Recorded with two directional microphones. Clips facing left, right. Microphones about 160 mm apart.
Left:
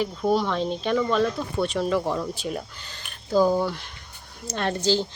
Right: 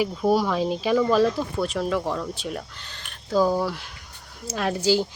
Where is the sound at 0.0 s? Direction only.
5° right (ahead or behind).